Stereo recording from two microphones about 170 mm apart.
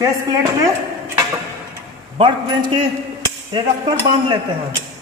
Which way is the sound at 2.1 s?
30° right (ahead or behind).